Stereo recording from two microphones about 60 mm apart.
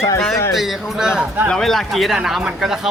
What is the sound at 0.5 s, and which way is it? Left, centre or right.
Speech, centre.